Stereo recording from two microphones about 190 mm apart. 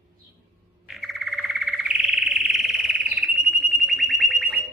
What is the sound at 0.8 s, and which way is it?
Frog, centre (ahead or behind).